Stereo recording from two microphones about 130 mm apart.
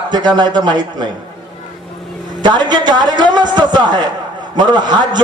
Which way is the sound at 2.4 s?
35° right (ahead or behind).